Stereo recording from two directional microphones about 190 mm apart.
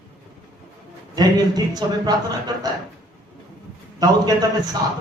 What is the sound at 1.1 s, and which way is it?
A man's voice, 20° right (ahead or behind).